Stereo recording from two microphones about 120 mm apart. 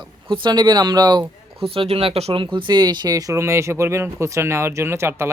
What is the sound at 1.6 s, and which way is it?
Speech, 50° right (ahead or behind).